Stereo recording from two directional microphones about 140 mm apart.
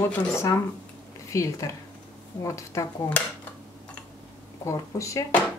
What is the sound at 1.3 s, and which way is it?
A woman's voice, 20° left (ahead or behind).